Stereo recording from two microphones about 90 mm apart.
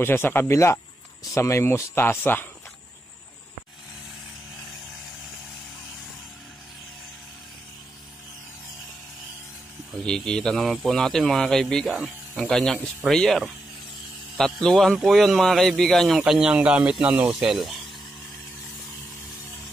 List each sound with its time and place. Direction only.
0.0 s speech: 25° left (ahead or behind)
9.9 s a man's voice: 10° left (ahead or behind)